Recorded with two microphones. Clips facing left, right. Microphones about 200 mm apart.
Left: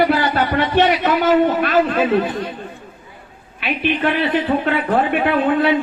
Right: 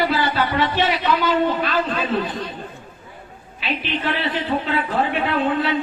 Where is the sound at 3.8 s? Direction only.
55° left (ahead or behind).